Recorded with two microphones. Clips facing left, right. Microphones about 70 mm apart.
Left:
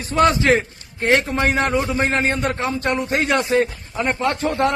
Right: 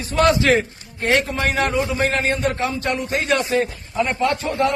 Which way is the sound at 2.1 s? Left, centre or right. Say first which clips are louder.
Even; left.